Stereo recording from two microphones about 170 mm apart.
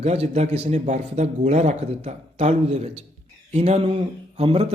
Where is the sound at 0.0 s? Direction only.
35° right (ahead or behind).